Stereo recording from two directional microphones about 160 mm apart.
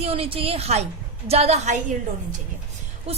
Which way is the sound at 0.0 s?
40° right (ahead or behind).